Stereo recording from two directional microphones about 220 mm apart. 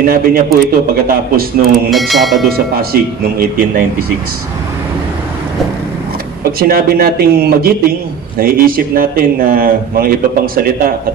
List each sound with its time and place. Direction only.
0.0 s speech: 40° right (ahead or behind)
1.9 s speech: centre (ahead or behind)
2.5 s speech: 45° right (ahead or behind)
6.6 s speech: 40° right (ahead or behind)